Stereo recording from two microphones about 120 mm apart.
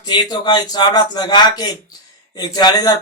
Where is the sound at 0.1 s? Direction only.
35° left (ahead or behind).